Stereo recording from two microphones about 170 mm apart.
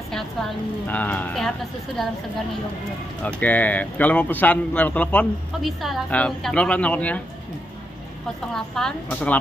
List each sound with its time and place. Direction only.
0.1 s a man's voice: 5° left (ahead or behind)
3.3 s a man's voice: 10° left (ahead or behind)
8.5 s a woman's voice: 5° left (ahead or behind)